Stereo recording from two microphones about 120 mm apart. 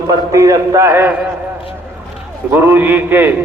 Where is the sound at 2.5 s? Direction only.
15° right (ahead or behind).